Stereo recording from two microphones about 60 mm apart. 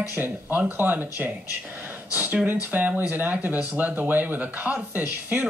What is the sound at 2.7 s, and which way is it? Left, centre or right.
Speech, right.